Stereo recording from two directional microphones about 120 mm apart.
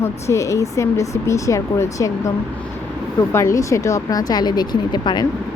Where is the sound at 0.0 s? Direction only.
25° left (ahead or behind).